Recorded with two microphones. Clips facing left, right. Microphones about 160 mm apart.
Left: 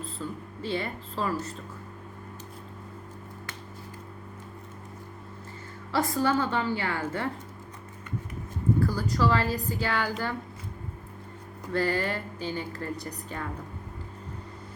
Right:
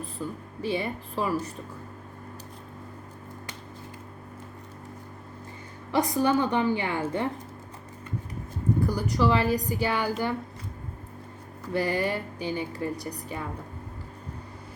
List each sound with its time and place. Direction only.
0.0 s speech: 15° right (ahead or behind)
5.9 s speech: 20° right (ahead or behind)
8.8 s speech: 15° right (ahead or behind)
11.7 s speech: 15° right (ahead or behind)